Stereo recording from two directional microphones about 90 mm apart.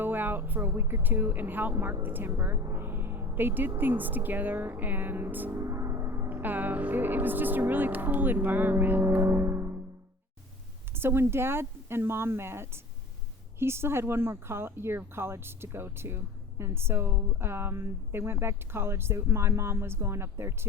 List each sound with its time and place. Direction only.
0.0 s speech: 20° right (ahead or behind)
5.5 s gong: 30° right (ahead or behind)
6.2 s speech: 20° right (ahead or behind)
10.9 s speech: 25° right (ahead or behind)